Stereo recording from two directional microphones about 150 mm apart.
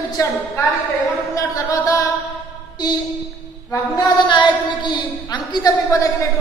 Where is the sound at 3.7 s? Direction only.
30° left (ahead or behind).